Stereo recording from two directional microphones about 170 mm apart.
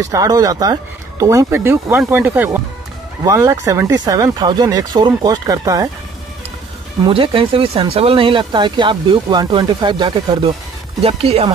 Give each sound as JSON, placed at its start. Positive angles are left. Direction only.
{"t": 0.0, "sound": "speech", "side_deg": -20}
{"t": 7.1, "sound": "speech", "side_deg": -30}
{"t": 11.0, "sound": "speech", "side_deg": -35}